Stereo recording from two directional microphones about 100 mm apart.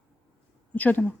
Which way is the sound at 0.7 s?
15° left (ahead or behind).